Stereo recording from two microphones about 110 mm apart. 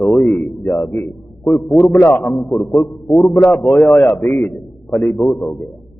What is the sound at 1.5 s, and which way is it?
Speech, centre (ahead or behind).